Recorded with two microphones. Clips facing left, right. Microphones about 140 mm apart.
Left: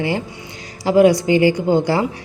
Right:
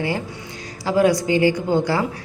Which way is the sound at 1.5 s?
30° left (ahead or behind).